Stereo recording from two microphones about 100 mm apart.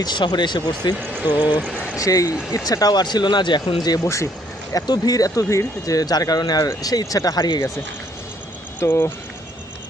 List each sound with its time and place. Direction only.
0.0 s speech: 45° left (ahead or behind)
1.1 s speech: 15° right (ahead or behind)
2.0 s speech: 35° left (ahead or behind)
4.0 s speech: 30° left (ahead or behind)
4.7 s speech: 40° left (ahead or behind)
8.9 s speech: 20° left (ahead or behind)